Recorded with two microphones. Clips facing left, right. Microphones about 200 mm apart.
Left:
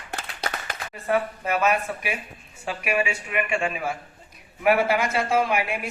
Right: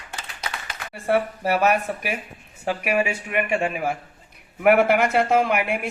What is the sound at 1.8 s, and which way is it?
Speech, 45° right (ahead or behind).